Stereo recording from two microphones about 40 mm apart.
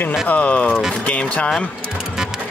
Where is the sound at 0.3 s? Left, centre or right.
Left.